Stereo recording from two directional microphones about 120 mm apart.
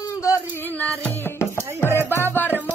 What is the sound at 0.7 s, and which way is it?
Music, 15° left (ahead or behind).